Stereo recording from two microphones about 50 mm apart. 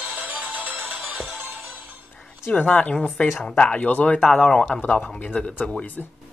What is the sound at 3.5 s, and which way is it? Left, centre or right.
Speech, left.